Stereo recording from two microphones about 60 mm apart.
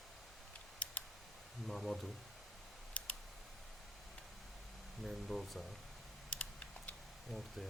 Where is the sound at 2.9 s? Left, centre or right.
Left.